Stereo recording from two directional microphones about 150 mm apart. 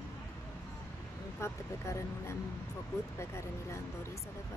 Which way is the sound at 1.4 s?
20° left (ahead or behind).